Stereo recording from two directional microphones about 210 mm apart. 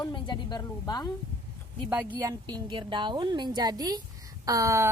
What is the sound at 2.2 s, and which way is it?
A woman's voice, 20° right (ahead or behind).